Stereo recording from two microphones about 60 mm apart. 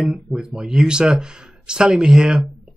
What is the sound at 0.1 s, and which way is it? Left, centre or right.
Speech, centre.